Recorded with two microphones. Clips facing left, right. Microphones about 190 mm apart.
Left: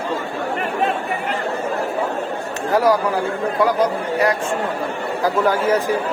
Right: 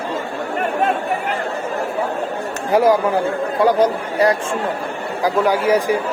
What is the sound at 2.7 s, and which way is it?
Speech, 20° right (ahead or behind).